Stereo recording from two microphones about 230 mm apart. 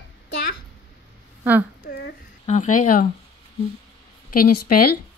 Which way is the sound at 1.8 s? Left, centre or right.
Left.